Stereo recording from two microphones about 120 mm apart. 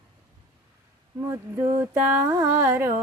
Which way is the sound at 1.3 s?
20° right (ahead or behind).